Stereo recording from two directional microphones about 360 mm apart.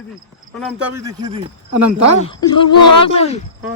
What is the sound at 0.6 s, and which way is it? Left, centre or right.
Speech, centre.